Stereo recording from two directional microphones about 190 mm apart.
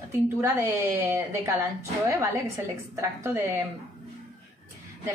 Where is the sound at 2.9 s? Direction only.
15° right (ahead or behind).